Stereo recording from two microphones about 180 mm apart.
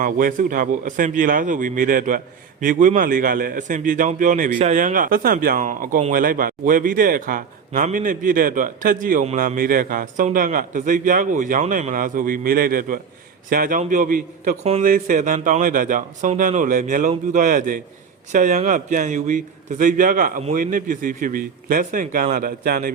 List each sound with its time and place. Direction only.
0.0 s a man's voice: 50° right (ahead or behind)
4.5 s speech: 35° right (ahead or behind)
4.8 s a man's voice: 50° right (ahead or behind)
9.2 s a man's voice: 40° right (ahead or behind); by 23.0 s 55° right (ahead or behind)